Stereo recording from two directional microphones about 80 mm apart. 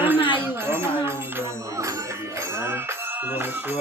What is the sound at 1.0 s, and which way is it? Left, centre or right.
Music, right.